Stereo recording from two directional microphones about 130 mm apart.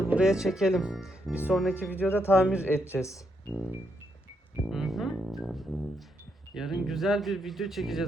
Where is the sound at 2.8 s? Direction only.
20° left (ahead or behind).